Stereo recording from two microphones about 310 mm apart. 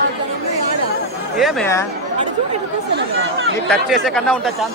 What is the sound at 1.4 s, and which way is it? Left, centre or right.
Speech, centre.